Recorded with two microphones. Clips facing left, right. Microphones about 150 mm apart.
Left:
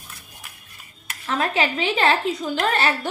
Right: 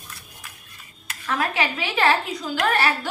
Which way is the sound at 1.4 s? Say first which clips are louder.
Left 3 dB; 30° left (ahead or behind).